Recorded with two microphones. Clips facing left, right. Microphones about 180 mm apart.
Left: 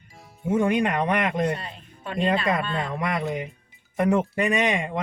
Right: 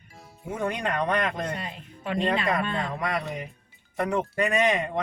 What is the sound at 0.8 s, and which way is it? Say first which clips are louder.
Speech: left 3 dB; 20° left (ahead or behind).